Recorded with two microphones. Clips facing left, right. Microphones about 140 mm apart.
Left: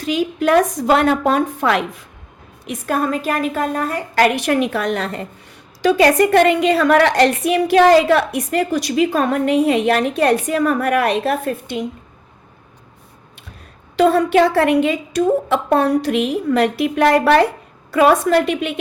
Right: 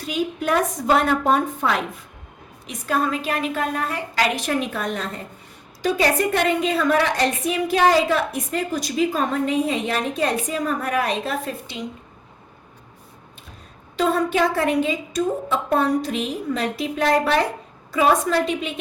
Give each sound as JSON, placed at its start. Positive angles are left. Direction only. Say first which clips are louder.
{"t": 0.0, "sound": "a woman's voice", "louder": "left 6 dB", "side_deg": 90}
{"t": 2.6, "sound": "a woman's voice", "louder": "left 3 dB", "side_deg": 50}
{"t": 13.9, "sound": "a woman's voice", "louder": "left 7 dB", "side_deg": 75}